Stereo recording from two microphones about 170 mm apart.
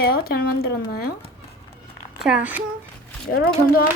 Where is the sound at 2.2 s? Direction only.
5° right (ahead or behind).